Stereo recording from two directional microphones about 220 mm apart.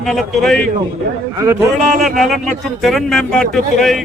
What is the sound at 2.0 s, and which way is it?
Speech, centre (ahead or behind).